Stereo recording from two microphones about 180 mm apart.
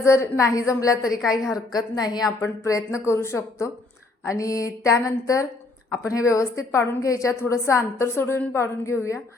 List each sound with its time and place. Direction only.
0.0 s a woman's voice: 15° left (ahead or behind)
1.1 s a woman's voice: 5° right (ahead or behind)
1.5 s a woman's voice: 20° left (ahead or behind)